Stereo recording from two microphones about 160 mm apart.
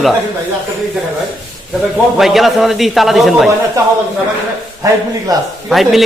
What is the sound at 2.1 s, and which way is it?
A man's voice, centre (ahead or behind).